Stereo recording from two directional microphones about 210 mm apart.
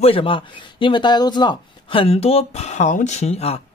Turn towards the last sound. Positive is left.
turn(degrees=30)  # may be behind; listen again after turning